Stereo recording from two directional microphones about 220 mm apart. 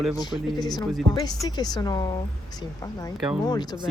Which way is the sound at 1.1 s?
15° left (ahead or behind).